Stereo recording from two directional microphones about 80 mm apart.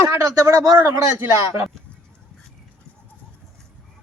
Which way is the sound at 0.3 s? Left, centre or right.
Right.